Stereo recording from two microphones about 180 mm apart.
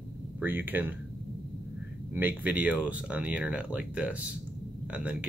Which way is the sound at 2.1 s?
10° right (ahead or behind).